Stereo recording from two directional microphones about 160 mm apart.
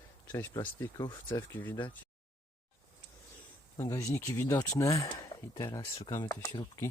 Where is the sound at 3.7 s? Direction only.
20° left (ahead or behind).